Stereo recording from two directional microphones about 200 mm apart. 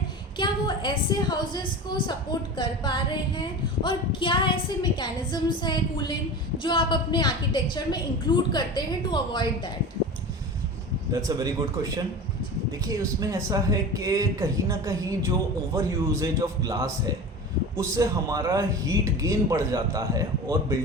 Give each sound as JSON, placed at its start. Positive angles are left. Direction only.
{"t": 0.3, "sound": "a woman's voice", "side_deg": 25}
{"t": 11.1, "sound": "speech", "side_deg": -20}